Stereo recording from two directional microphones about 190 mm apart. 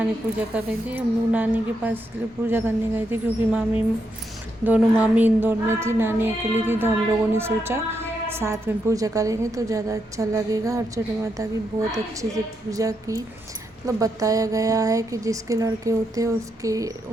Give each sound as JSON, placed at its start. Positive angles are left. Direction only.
{"t": 0.3, "sound": "a woman's voice", "side_deg": -10}